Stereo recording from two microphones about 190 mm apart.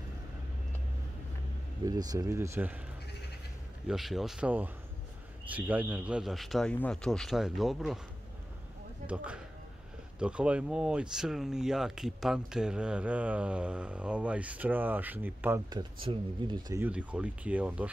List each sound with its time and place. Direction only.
1.9 s speech: 20° right (ahead or behind)
3.8 s speech: centre (ahead or behind)
9.0 s speech: 5° right (ahead or behind)
15.7 s speech: 25° right (ahead or behind)
16.8 s speech: 5° right (ahead or behind)